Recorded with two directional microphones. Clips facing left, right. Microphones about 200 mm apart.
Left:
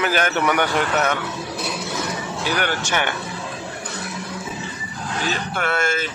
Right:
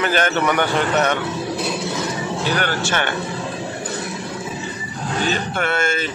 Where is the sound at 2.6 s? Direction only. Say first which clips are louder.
Right 1 dB; 15° left (ahead or behind).